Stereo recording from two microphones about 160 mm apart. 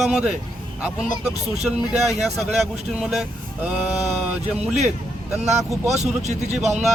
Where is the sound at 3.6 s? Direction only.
10° right (ahead or behind).